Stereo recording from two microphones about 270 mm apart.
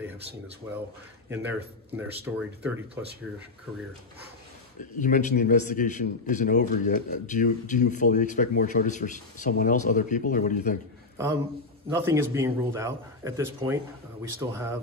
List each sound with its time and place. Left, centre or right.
1.3 s speech: centre
4.7 s a man's voice: left
11.9 s speech: centre